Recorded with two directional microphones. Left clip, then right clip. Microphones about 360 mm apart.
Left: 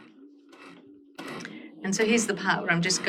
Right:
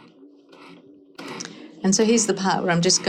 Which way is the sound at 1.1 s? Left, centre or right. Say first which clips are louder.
Right 3 dB; centre.